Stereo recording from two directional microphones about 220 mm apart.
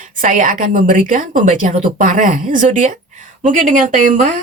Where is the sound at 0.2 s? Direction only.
35° right (ahead or behind).